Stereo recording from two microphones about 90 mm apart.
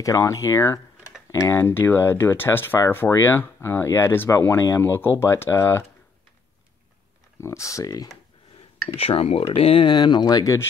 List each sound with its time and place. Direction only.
0.0 s speech: 35° left (ahead or behind)
7.3 s speech: 30° left (ahead or behind)
8.8 s speech: 90° left
9.9 s speech: 55° left (ahead or behind); by 10.7 s 35° left (ahead or behind)